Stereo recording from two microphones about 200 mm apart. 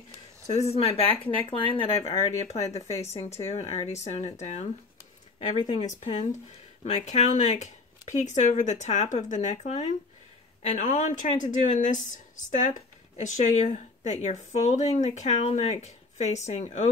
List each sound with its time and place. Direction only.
0.5 s speech: 30° left (ahead or behind)
5.5 s speech: 20° left (ahead or behind)
5.8 s speech: 35° left (ahead or behind)